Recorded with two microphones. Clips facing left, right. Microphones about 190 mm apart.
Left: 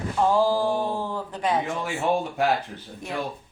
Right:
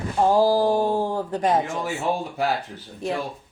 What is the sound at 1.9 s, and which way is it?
Speech, centre (ahead or behind).